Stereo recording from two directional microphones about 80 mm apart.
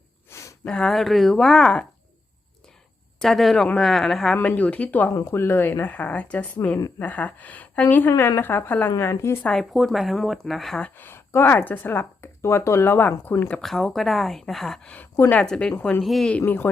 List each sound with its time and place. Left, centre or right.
0.3 s a sound: left
0.6 s speech: centre
3.2 s a woman's voice: centre
4.4 s speech: centre
5.1 s speech: left
9.4 s a woman's voice: centre
10.9 s speech: left
13.6 s a woman's voice: centre
16.0 s a woman's voice: centre